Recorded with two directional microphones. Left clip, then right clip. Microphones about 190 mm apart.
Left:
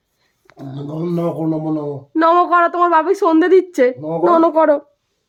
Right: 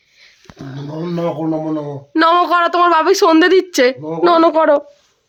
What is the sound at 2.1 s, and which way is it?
A woman's voice, 15° left (ahead or behind).